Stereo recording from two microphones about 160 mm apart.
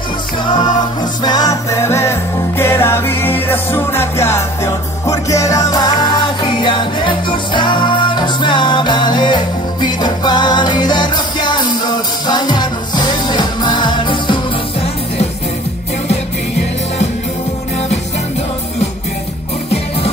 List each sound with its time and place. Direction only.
1.2 s music: 25° left (ahead or behind)